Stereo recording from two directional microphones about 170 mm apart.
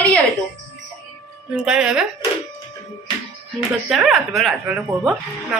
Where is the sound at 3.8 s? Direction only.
5° right (ahead or behind).